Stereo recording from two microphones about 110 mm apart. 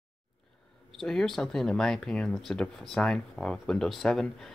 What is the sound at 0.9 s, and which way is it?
Speech, 5° left (ahead or behind).